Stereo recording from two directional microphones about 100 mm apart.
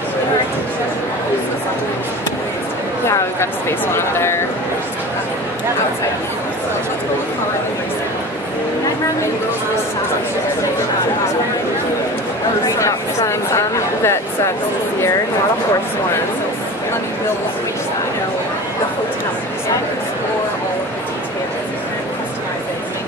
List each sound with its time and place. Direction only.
3.1 s speech: 25° left (ahead or behind)
12.7 s speech: 30° left (ahead or behind)